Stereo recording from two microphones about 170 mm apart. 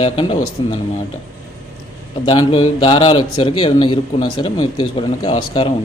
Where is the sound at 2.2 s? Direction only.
30° left (ahead or behind).